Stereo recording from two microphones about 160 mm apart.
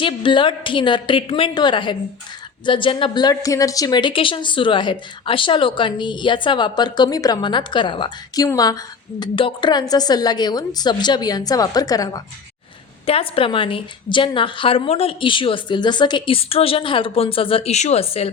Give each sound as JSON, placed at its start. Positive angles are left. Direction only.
{"t": 0.0, "sound": "a woman's voice", "side_deg": 30}
{"t": 13.1, "sound": "a woman's voice", "side_deg": 35}